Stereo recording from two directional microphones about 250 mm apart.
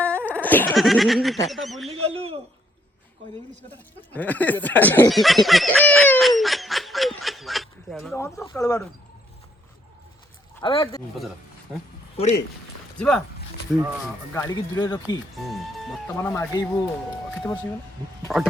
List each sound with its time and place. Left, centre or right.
0.0 s speech: centre
1.9 s speech: right
4.1 s speech: centre
10.6 s speech: centre
12.1 s speech: left
13.0 s speech: centre
14.3 s speech: centre
15.4 s speech: centre
18.3 s speech: centre